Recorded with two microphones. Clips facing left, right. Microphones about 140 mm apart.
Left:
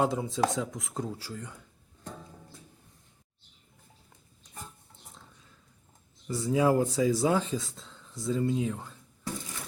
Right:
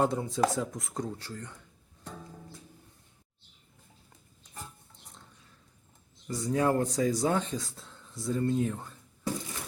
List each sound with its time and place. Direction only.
0.0 s speech: centre (ahead or behind)
6.2 s speech: 5° left (ahead or behind)